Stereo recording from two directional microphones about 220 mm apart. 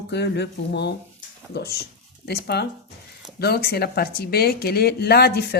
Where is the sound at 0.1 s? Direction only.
50° left (ahead or behind).